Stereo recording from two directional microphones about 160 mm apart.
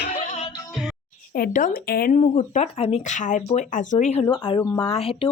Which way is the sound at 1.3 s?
60° left (ahead or behind).